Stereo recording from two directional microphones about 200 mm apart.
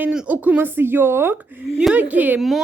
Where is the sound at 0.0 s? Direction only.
5° right (ahead or behind).